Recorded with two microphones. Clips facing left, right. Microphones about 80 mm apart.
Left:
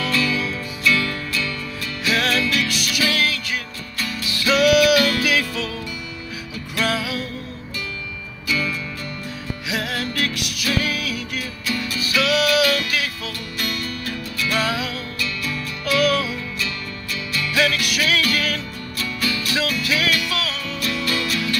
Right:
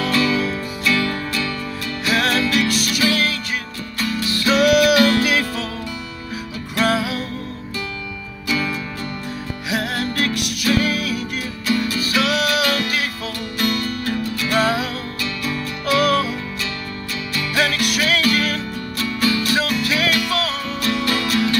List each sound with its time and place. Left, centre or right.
0.0 s music: right
2.0 s music: right
6.8 s music: right
8.5 s music: right
11.6 s music: right